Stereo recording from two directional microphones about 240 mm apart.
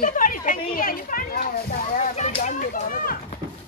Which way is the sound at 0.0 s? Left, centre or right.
Left.